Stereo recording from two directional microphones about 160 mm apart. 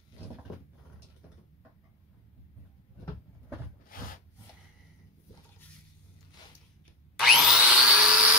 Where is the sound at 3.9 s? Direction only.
60° left (ahead or behind).